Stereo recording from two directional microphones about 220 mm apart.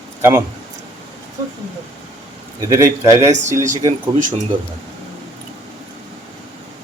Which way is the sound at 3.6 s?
35° right (ahead or behind).